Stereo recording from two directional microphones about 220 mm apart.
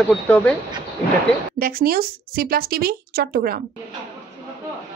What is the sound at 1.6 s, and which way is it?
Speech, 40° right (ahead or behind).